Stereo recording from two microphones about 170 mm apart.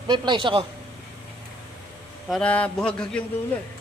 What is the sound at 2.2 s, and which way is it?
Speech, 5° left (ahead or behind).